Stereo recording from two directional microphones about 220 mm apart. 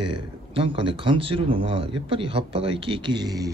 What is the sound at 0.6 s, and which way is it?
Speech, 25° right (ahead or behind).